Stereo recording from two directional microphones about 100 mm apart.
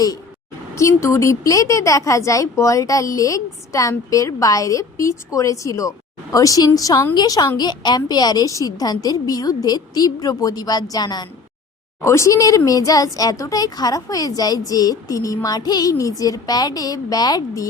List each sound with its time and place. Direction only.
0.8 s speech: 30° left (ahead or behind)
12.0 s speech: 30° left (ahead or behind)